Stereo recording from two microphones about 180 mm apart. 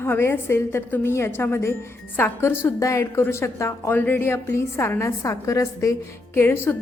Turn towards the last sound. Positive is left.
turn(degrees=15)  # may be behind; listen again after turning